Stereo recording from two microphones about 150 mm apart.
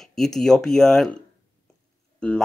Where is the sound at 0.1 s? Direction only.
5° left (ahead or behind).